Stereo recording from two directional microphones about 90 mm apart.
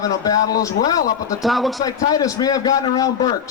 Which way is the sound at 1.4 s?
Centre (ahead or behind).